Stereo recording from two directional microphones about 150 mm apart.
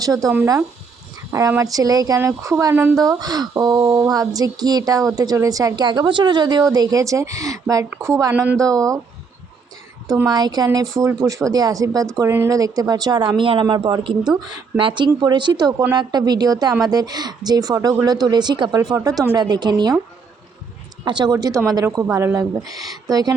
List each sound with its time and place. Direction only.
0.0 s speech: 25° right (ahead or behind)
1.3 s speech: 20° right (ahead or behind)
10.2 s speech: 25° right (ahead or behind)
21.0 s speech: 30° right (ahead or behind)